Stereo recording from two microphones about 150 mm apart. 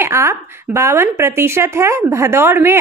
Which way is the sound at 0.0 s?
20° right (ahead or behind).